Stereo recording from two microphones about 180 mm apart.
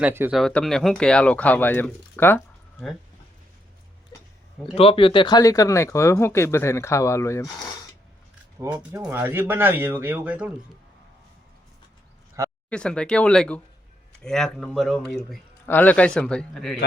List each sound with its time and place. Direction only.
0.0 s speech: 10° right (ahead or behind)
0.3 s speech: centre (ahead or behind)
4.6 s speech: 30° left (ahead or behind); by 7.4 s 15° left (ahead or behind)
8.5 s speech: 10° right (ahead or behind)
12.4 s a sound: 20° right (ahead or behind)
12.7 s a man's voice: 5° left (ahead or behind)